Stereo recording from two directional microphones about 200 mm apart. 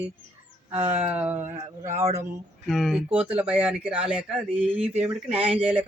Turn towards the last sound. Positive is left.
turn(degrees=-30)  # may be behind; listen again after turning